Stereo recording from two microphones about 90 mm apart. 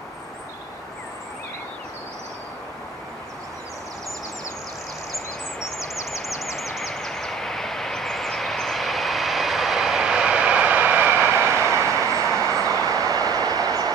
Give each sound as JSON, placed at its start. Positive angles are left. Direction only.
{"t": 6.0, "sound": "vehicle", "side_deg": 0}
{"t": 11.3, "sound": "vehicle", "side_deg": -25}
{"t": 12.8, "sound": "train", "side_deg": -40}